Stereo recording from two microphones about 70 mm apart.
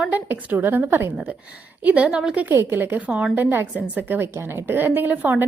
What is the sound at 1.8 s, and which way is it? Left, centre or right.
A woman's voice, centre.